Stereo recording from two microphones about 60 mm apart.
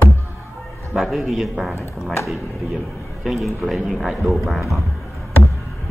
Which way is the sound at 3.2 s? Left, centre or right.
Centre.